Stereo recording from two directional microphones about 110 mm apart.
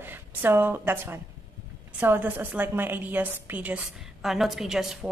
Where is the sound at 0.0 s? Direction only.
20° right (ahead or behind).